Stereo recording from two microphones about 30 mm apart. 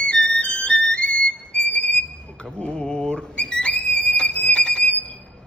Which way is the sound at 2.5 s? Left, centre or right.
Left.